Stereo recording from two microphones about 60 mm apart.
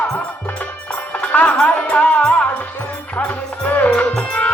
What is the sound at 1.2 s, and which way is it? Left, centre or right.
Music, left.